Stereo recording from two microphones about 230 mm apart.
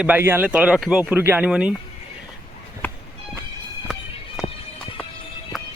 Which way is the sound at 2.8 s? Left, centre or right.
Centre.